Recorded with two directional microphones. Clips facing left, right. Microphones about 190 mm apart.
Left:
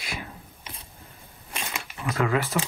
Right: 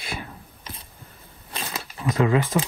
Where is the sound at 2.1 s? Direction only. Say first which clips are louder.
Right 4 dB; 20° right (ahead or behind).